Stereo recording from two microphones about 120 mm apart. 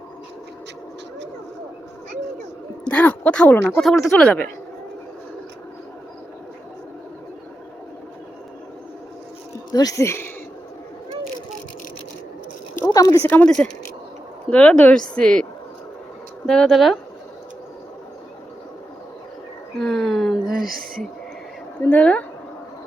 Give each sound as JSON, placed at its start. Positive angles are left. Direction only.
{"t": 2.8, "sound": "speech", "side_deg": 10}
{"t": 9.7, "sound": "speech", "side_deg": 30}
{"t": 12.9, "sound": "speech", "side_deg": 30}
{"t": 16.5, "sound": "speech", "side_deg": 5}
{"t": 19.8, "sound": "a sound", "side_deg": 0}
{"t": 21.8, "sound": "speech", "side_deg": 15}